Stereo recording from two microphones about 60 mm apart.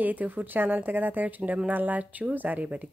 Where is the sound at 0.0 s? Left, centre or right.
Right.